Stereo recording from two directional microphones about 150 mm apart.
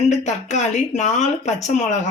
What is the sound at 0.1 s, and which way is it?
Speech, 50° left (ahead or behind).